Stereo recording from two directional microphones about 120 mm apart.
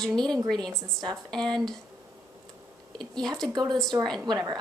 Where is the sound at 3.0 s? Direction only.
5° left (ahead or behind).